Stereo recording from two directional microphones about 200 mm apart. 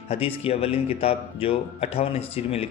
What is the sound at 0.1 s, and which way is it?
A man's voice, 30° left (ahead or behind).